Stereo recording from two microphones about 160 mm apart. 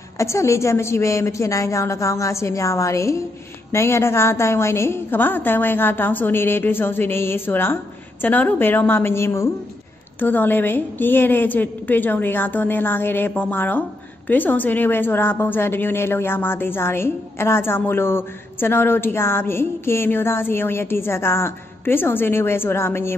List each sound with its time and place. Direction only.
0.2 s a woman's voice: 20° left (ahead or behind)